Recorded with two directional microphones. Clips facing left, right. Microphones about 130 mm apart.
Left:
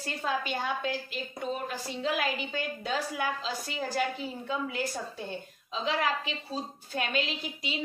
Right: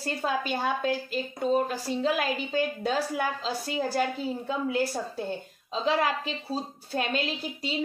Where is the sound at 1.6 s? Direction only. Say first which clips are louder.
Right 5 dB; 40° right (ahead or behind).